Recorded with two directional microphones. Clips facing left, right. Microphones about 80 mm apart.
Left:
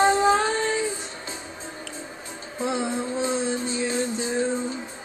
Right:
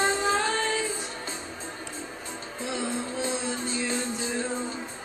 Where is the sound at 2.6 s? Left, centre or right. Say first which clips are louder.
Left 5 dB; left.